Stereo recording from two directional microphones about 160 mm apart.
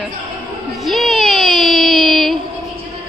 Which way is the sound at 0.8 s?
Centre (ahead or behind).